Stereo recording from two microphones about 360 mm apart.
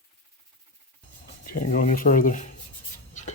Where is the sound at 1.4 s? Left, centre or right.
Left.